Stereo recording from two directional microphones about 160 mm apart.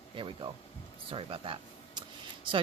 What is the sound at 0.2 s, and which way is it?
Speech, 30° right (ahead or behind).